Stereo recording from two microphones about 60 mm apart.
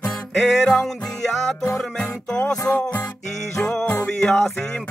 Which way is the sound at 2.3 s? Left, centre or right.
Centre.